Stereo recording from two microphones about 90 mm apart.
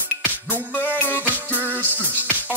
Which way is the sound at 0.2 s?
20° right (ahead or behind).